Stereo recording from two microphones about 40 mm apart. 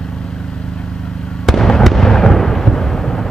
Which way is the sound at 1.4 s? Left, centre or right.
Centre.